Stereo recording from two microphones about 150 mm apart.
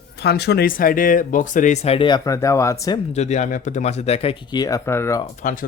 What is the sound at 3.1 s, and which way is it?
Speech, 50° left (ahead or behind).